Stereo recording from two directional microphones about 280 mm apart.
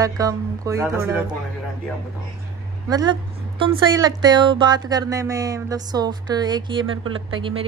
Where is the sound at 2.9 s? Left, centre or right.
Centre.